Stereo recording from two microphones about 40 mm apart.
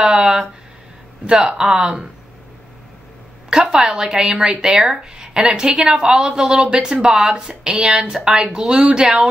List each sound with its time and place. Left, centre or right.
0.1 s a sound: right
1.2 s speech: right
3.4 s speech: centre
8.1 s speech: centre
8.4 s speech: centre